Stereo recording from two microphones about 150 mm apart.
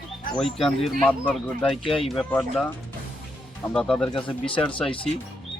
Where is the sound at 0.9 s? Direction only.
5° left (ahead or behind).